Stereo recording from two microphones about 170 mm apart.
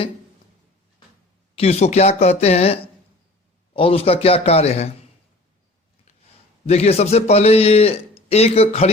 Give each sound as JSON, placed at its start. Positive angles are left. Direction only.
{"t": 1.5, "sound": "a man's voice", "side_deg": 35}
{"t": 6.7, "sound": "a man's voice", "side_deg": 40}